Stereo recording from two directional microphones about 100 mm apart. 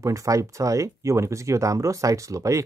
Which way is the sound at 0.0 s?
35° right (ahead or behind).